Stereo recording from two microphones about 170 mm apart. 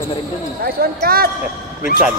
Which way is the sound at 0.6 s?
60° right (ahead or behind).